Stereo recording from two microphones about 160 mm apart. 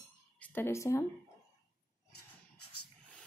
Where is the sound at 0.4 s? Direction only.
10° left (ahead or behind).